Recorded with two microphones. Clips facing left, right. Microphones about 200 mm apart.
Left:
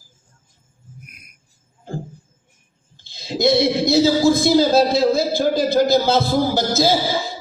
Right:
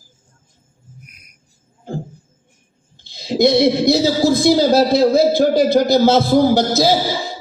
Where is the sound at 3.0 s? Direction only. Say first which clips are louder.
Right 5 dB; 55° right (ahead or behind).